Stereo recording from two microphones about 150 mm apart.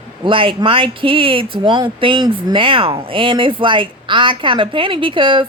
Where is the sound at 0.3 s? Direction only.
35° right (ahead or behind).